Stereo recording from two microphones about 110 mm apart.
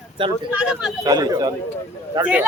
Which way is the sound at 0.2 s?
50° right (ahead or behind).